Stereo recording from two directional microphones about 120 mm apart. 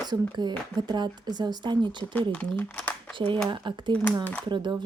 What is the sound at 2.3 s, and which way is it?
Speech, 10° left (ahead or behind).